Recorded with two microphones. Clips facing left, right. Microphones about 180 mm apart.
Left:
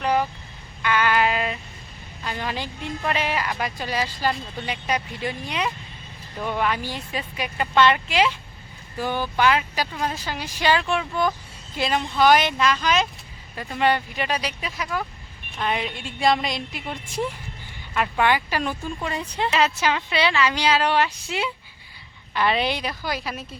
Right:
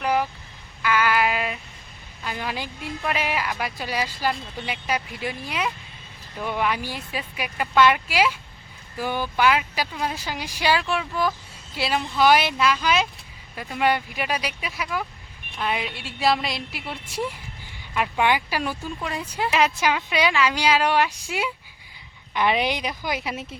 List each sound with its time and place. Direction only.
0.0 s vehicle: 10° right (ahead or behind)
0.8 s a sound: 5° right (ahead or behind)
2.2 s a woman's voice: 10° right (ahead or behind)